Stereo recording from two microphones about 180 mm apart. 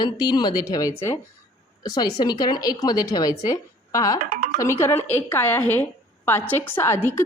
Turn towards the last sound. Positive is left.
turn(degrees=15)  # may be behind; listen again after turning